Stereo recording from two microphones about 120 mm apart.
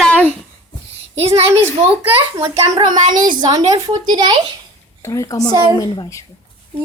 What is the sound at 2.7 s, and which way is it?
A woman's voice, 40° right (ahead or behind).